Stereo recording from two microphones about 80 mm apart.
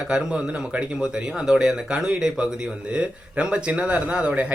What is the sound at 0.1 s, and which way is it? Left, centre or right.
A man's voice, centre.